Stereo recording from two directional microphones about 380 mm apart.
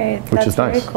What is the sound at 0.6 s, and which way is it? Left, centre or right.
Speech, right.